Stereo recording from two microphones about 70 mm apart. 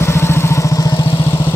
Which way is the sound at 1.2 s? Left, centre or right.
Left.